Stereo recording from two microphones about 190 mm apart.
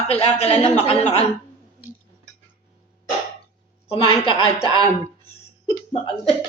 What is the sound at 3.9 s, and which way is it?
Speech, 30° left (ahead or behind).